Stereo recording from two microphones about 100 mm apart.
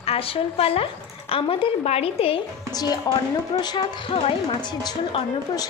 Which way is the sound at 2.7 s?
40° left (ahead or behind).